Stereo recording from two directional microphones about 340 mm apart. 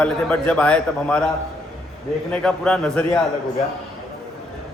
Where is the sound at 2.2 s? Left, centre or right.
Centre.